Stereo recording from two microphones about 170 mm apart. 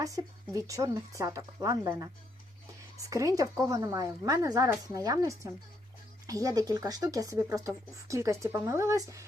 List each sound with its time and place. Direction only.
0.5 s speech: 20° right (ahead or behind)
3.1 s speech: 20° right (ahead or behind)